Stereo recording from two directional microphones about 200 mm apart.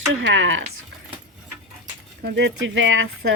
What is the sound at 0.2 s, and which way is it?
Speech, 70° right (ahead or behind).